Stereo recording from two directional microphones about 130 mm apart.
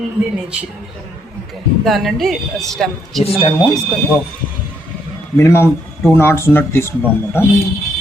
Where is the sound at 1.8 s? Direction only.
Centre (ahead or behind).